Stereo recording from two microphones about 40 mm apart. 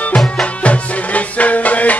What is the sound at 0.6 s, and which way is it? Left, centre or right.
Music, left.